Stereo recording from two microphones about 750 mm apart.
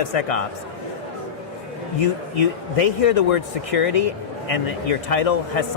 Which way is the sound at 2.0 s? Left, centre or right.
Left.